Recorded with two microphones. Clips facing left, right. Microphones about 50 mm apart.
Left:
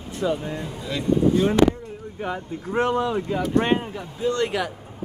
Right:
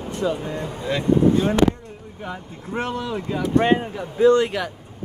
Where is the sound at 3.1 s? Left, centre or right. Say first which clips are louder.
Right 1 dB; centre.